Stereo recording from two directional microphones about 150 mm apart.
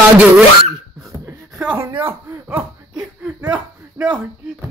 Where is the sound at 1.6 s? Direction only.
10° right (ahead or behind).